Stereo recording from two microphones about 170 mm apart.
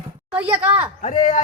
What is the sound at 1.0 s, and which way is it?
Speech, 45° left (ahead or behind).